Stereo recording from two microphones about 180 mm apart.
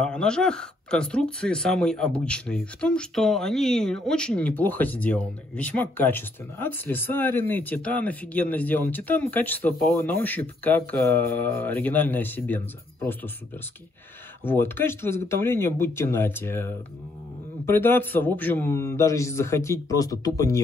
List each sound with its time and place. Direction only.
0.0 s speech: 5° left (ahead or behind)
14.4 s speech: 10° left (ahead or behind)